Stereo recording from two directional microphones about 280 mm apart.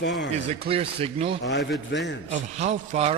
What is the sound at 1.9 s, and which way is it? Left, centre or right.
Speech, left.